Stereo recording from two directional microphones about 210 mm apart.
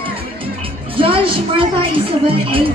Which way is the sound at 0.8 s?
25° right (ahead or behind).